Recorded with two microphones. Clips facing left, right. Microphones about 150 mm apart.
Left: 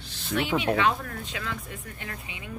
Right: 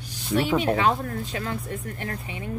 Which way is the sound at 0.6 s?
35° right (ahead or behind).